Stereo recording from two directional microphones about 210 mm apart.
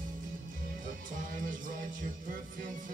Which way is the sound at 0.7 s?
40° right (ahead or behind).